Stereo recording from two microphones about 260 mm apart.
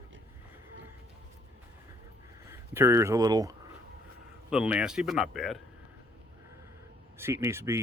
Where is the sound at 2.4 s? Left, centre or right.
Centre.